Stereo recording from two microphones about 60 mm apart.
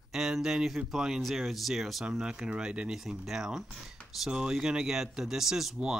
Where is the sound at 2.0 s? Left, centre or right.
Centre.